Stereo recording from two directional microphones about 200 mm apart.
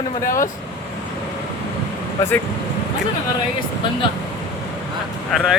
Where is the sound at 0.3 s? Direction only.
40° left (ahead or behind).